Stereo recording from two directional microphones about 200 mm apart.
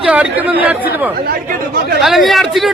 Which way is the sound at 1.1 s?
50° right (ahead or behind).